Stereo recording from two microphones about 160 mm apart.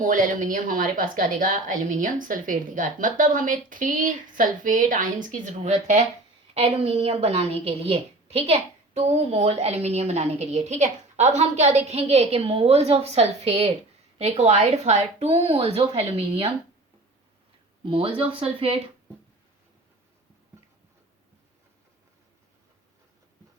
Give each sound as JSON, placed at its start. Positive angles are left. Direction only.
{"t": 0.0, "sound": "a woman's voice", "side_deg": -55}
{"t": 17.8, "sound": "a woman's voice", "side_deg": -35}